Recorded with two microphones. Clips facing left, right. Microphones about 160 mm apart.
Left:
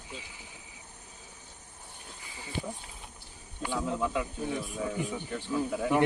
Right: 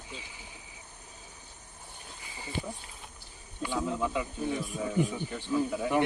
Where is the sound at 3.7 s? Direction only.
Centre (ahead or behind).